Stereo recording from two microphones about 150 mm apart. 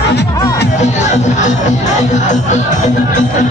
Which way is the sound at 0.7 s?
50° left (ahead or behind).